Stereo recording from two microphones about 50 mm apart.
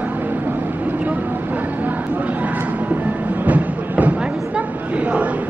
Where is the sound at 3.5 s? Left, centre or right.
Right.